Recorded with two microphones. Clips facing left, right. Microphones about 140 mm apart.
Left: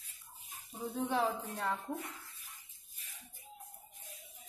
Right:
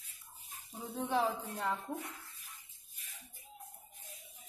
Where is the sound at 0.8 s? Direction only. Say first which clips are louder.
Even; 5° left (ahead or behind).